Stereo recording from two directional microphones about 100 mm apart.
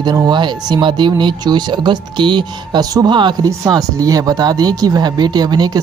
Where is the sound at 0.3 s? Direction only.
50° right (ahead or behind).